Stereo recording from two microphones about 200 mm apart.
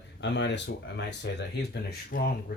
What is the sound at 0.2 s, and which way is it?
Speech, 60° left (ahead or behind).